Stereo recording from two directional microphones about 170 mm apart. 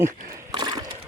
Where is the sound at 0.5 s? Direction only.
25° right (ahead or behind).